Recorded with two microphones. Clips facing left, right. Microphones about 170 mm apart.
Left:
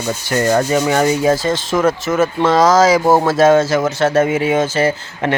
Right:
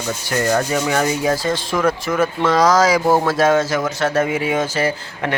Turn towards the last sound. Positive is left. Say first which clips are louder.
# left 4 dB
turn(degrees=30)  # may be behind; listen again after turning